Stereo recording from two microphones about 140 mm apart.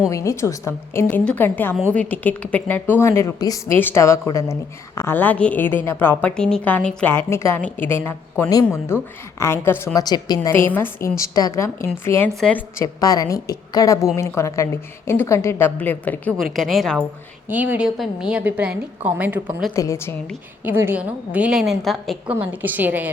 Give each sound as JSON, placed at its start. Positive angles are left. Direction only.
{"t": 0.1, "sound": "a woman's voice", "side_deg": 20}
{"t": 10.5, "sound": "a woman's voice", "side_deg": 15}
{"t": 12.8, "sound": "a woman's voice", "side_deg": 25}
{"t": 16.4, "sound": "a woman's voice", "side_deg": 0}
{"t": 17.5, "sound": "a woman's voice", "side_deg": -10}
{"t": 19.7, "sound": "a woman's voice", "side_deg": 20}
{"t": 20.7, "sound": "a woman's voice", "side_deg": -15}
{"t": 22.4, "sound": "a woman's voice", "side_deg": -10}